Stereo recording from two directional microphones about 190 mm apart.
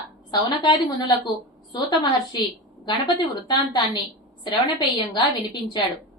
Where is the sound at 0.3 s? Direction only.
25° left (ahead or behind).